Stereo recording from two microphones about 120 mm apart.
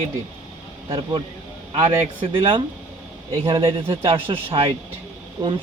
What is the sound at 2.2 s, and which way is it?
Speech, 45° right (ahead or behind).